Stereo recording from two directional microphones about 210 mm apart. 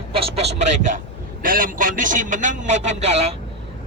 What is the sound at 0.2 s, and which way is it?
A man's voice, 30° right (ahead or behind).